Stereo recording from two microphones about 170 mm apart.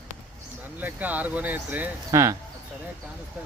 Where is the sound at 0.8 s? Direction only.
10° right (ahead or behind).